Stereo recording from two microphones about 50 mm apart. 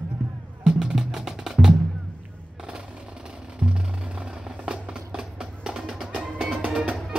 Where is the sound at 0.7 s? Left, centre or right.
Centre.